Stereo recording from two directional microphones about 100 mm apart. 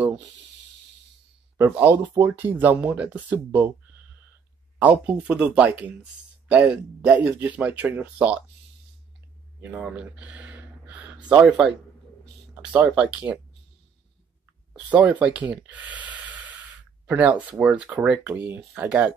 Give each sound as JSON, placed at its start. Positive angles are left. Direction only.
{"t": 1.6, "sound": "speech", "side_deg": -20}
{"t": 4.7, "sound": "speech", "side_deg": -15}
{"t": 9.8, "sound": "a sound", "side_deg": -10}
{"t": 11.2, "sound": "speech", "side_deg": -10}
{"t": 12.8, "sound": "speech", "side_deg": -10}
{"t": 14.7, "sound": "a sound", "side_deg": -15}
{"t": 15.0, "sound": "speech", "side_deg": -15}
{"t": 18.9, "sound": "speech", "side_deg": -10}